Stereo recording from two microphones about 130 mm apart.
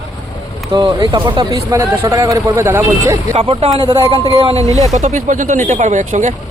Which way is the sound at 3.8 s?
35° right (ahead or behind).